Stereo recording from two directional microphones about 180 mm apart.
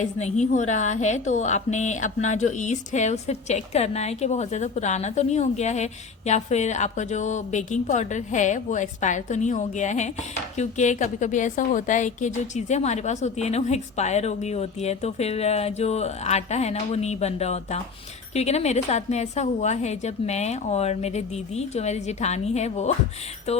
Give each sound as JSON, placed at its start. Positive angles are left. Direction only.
{"t": 0.0, "sound": "a woman's voice", "side_deg": 40}